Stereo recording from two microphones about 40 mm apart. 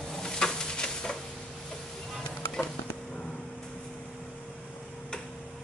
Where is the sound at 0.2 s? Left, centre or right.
Centre.